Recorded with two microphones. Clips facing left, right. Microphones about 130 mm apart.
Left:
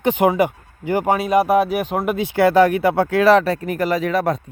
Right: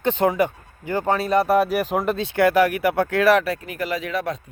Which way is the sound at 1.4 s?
Centre (ahead or behind).